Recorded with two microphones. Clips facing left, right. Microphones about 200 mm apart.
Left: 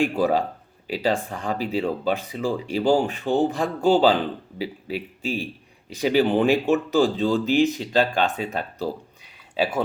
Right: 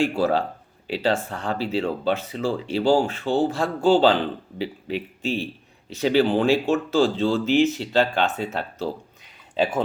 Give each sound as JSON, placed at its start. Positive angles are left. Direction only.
{"t": 0.0, "sound": "speech", "side_deg": 15}